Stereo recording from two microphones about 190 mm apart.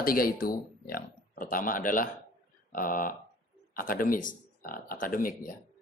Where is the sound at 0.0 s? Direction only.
50° left (ahead or behind).